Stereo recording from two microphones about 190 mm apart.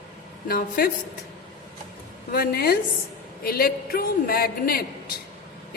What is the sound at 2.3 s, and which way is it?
A woman's voice, 55° left (ahead or behind).